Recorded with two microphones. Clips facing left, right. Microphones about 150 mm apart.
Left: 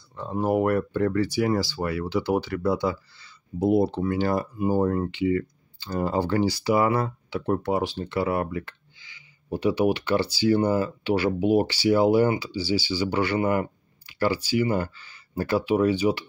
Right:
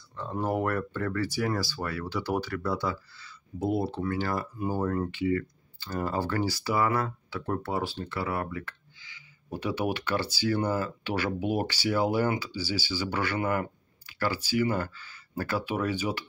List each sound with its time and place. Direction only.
0.1 s speech: 15° left (ahead or behind)
9.5 s speech: 10° left (ahead or behind)